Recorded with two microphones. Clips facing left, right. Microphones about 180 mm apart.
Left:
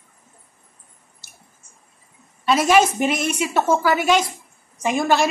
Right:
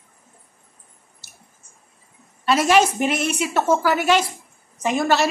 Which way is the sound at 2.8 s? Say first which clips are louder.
Left 1 dB; 5° right (ahead or behind).